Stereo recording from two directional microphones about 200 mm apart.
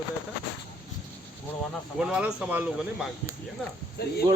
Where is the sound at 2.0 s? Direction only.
5° right (ahead or behind).